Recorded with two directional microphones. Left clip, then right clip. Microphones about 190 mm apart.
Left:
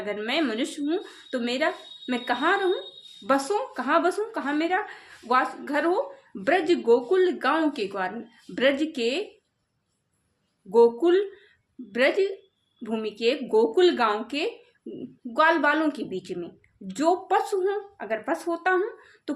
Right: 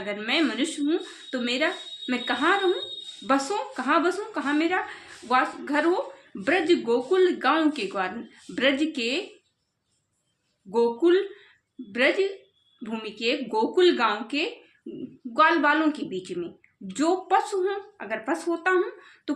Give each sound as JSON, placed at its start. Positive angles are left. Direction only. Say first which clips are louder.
{"t": 0.0, "sound": "a woman's voice", "louder": "right 1 dB", "side_deg": 20}
{"t": 10.7, "sound": "a woman's voice", "louder": "left 3 dB", "side_deg": 20}